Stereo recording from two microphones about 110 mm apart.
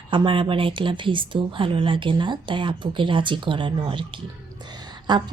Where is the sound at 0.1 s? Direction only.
50° right (ahead or behind).